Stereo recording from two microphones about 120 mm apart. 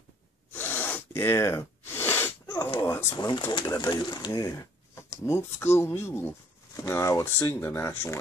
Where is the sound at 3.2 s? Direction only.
35° left (ahead or behind).